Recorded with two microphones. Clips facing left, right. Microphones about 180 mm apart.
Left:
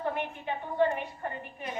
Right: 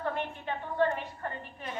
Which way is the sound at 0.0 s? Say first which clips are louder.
Left 1 dB; 15° left (ahead or behind).